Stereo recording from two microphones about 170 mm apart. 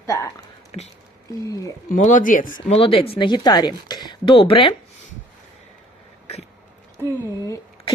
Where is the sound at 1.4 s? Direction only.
20° left (ahead or behind).